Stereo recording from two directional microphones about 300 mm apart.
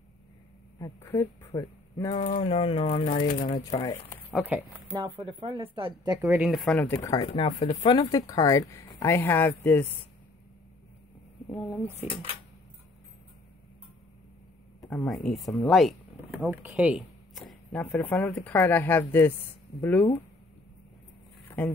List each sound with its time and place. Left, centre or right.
0.7 s speech: centre; by 3.8 s left
3.8 s speech: centre
5.1 s speech: centre
6.5 s speech: centre
14.8 s speech: centre
21.5 s a sound: centre